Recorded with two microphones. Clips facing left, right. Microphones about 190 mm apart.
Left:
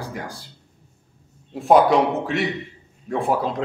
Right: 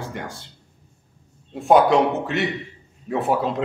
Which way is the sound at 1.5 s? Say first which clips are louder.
Even; centre (ahead or behind).